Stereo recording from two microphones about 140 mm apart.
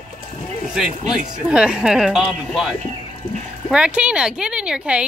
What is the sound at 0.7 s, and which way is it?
Speech, 5° right (ahead or behind).